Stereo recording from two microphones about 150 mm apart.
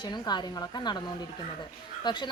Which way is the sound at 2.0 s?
30° left (ahead or behind).